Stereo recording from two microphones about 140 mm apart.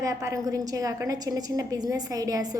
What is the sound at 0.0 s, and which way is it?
A woman's voice, 20° right (ahead or behind).